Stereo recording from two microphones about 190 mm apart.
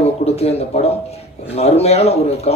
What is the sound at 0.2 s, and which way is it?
Speech, 35° left (ahead or behind).